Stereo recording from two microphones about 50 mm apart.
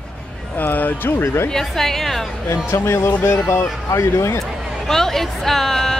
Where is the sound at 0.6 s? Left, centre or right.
Left.